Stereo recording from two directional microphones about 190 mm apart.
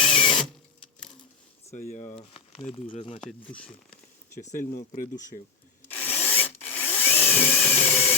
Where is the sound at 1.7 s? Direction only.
40° left (ahead or behind).